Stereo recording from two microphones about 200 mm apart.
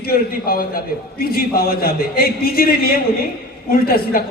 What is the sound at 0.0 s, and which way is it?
A man's voice, 50° left (ahead or behind).